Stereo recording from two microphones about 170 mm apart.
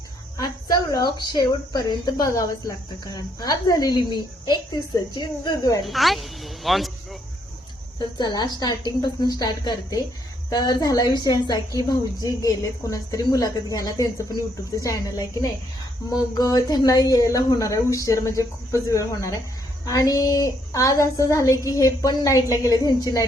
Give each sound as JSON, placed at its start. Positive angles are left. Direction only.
{"t": 0.3, "sound": "a woman's voice", "side_deg": 20}
{"t": 5.8, "sound": "a woman's voice", "side_deg": 0}
{"t": 7.9, "sound": "a woman's voice", "side_deg": 25}